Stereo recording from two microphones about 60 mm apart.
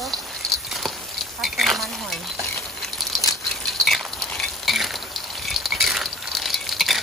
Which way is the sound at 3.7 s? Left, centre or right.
Centre.